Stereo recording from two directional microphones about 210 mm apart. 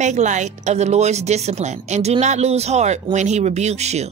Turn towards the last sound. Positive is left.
turn(degrees=-30)  # may be behind; listen again after turning